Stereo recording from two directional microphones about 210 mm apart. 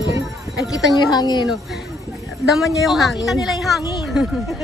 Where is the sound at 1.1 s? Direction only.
20° left (ahead or behind).